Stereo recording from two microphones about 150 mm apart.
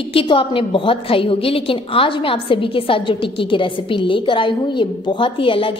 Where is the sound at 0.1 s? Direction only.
35° left (ahead or behind).